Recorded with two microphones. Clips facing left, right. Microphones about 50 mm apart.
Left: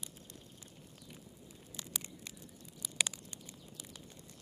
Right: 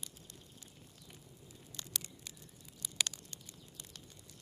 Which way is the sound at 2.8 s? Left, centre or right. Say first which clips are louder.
Left 2 dB; centre.